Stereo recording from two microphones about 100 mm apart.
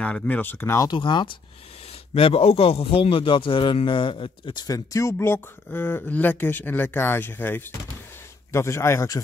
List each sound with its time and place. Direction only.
0.0 s speech: 15° left (ahead or behind)
0.9 s speech: 55° left (ahead or behind)
2.1 s speech: 70° left (ahead or behind)
4.6 s speech: 30° left (ahead or behind)